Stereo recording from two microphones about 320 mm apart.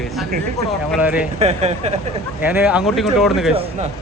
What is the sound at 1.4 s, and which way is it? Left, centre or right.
Speech, centre.